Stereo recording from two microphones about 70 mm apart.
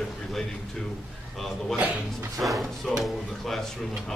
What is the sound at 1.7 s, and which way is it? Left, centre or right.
Speech, right.